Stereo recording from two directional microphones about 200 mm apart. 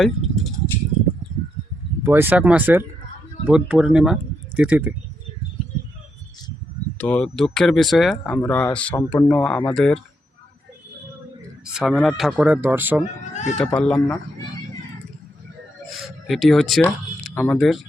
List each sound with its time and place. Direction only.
0.0 s a sound: centre (ahead or behind)
2.0 s speech: 10° right (ahead or behind)
7.0 s speech: 5° left (ahead or behind)
11.6 s speech: 5° right (ahead or behind)
13.3 s speech: 35° left (ahead or behind)
13.6 s speech: 5° left (ahead or behind)
16.0 s speech: centre (ahead or behind)